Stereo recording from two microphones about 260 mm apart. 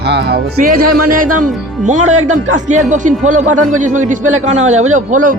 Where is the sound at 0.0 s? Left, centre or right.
Right.